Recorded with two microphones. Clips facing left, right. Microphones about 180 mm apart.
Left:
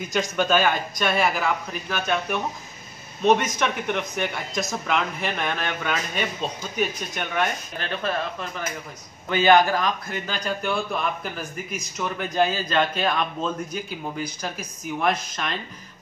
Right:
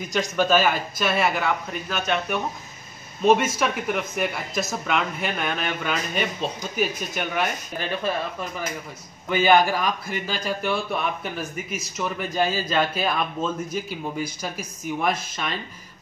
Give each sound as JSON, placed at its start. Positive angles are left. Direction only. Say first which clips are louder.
{"t": 0.0, "sound": "a man's voice", "louder": "right 1 dB", "side_deg": 0}